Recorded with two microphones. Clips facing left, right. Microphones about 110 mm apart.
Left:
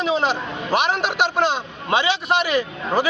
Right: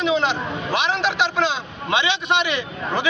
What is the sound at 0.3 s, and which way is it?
A man's voice, 45° left (ahead or behind).